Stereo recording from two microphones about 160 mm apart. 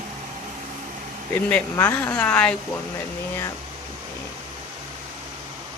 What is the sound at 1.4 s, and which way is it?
Speech, 10° left (ahead or behind).